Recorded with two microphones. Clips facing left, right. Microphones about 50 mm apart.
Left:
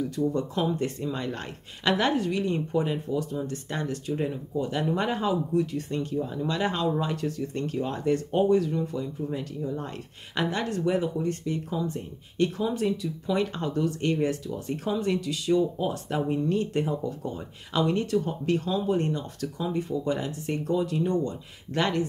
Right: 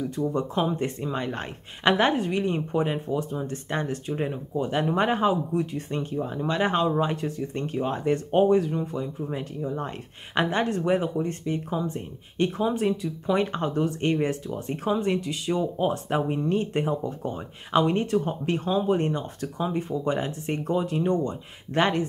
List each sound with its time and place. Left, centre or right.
0.0 s speech: right